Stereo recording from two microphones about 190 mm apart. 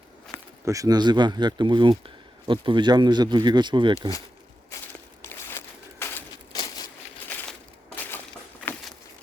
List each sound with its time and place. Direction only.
0.6 s speech: 15° right (ahead or behind)
4.7 s walk: 15° left (ahead or behind)
5.2 s a sound: 10° left (ahead or behind)